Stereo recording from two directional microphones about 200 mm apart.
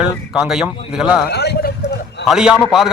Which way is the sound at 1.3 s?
55° left (ahead or behind).